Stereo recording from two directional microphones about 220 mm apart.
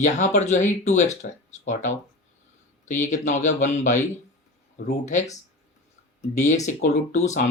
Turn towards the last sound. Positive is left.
turn(degrees=35)  # may be behind; listen again after turning